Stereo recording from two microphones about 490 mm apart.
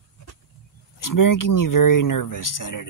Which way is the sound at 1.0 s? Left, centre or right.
Left.